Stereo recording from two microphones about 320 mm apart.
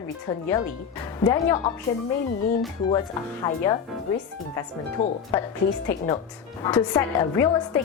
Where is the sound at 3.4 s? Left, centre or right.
Centre.